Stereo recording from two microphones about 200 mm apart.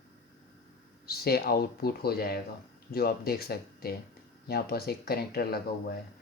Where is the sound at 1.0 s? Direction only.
50° left (ahead or behind).